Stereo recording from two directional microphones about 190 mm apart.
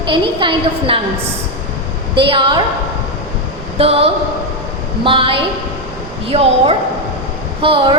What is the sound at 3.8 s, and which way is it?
A woman's voice, 30° right (ahead or behind).